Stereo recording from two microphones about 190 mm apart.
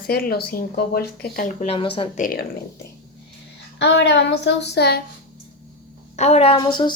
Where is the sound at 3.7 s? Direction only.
60° left (ahead or behind).